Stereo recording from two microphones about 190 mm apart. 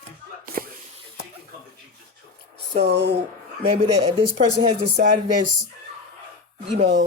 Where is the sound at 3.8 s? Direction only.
35° right (ahead or behind).